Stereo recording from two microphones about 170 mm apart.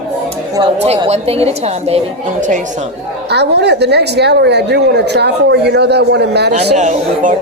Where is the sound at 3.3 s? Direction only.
80° right.